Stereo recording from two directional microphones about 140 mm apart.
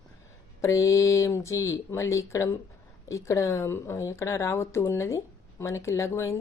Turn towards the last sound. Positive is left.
turn(degrees=20)  # may be behind; listen again after turning